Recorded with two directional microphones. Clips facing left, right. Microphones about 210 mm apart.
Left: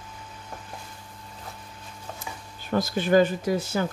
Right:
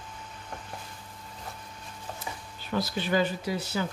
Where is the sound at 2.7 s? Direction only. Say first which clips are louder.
Left 7 dB; 45° left (ahead or behind).